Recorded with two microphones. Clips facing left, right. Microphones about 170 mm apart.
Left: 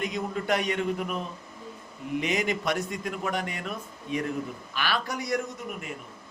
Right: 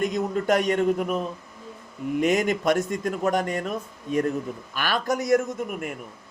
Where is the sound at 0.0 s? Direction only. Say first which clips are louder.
Right 6 dB; 45° right (ahead or behind).